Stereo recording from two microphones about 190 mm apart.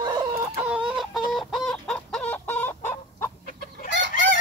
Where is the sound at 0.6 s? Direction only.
5° right (ahead or behind); by 3.3 s 10° left (ahead or behind).